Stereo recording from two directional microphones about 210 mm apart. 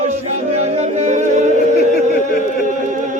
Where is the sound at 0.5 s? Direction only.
30° right (ahead or behind).